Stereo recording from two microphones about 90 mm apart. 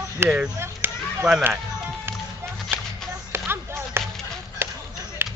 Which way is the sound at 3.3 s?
25° right (ahead or behind).